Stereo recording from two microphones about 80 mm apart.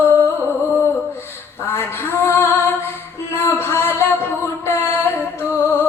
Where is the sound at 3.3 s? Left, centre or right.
Left.